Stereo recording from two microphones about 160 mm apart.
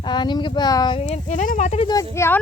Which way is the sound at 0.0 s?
30° left (ahead or behind).